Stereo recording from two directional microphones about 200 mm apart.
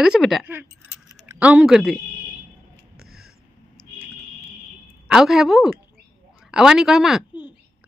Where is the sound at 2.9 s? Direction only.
50° right (ahead or behind).